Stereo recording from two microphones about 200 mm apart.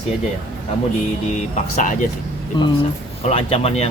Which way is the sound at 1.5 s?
40° left (ahead or behind).